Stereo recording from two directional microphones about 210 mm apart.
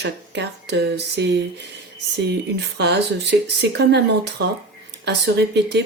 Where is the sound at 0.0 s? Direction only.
55° right (ahead or behind).